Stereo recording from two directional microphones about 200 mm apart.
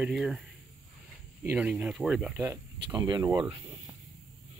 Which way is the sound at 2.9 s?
20° right (ahead or behind).